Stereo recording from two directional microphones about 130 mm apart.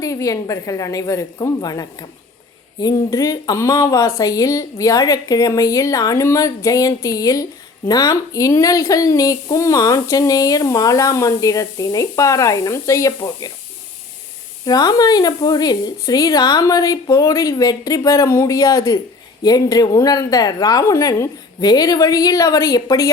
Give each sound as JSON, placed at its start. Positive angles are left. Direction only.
{"t": 0.0, "sound": "speech", "side_deg": 25}
{"t": 14.6, "sound": "speech", "side_deg": 30}